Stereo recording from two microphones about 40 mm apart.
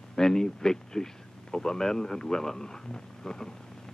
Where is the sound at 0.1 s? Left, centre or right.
Centre.